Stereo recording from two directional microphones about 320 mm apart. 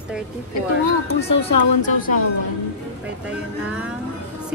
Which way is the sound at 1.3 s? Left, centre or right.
Left.